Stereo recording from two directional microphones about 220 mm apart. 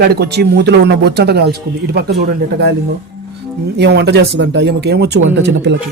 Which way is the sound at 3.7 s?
50° right (ahead or behind).